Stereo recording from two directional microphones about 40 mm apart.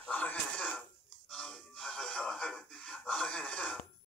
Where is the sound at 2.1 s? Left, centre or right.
Left.